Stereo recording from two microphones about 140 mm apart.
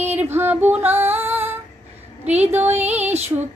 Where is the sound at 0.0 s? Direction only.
15° right (ahead or behind).